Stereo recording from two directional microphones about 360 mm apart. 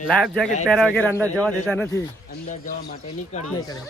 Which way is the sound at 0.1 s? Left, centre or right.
Centre.